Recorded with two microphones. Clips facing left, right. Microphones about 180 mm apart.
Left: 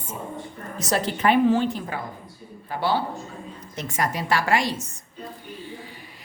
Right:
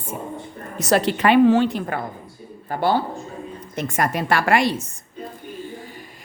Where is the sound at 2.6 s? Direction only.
50° right (ahead or behind).